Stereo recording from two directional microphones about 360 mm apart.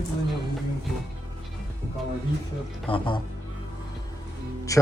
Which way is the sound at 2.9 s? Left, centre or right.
Centre.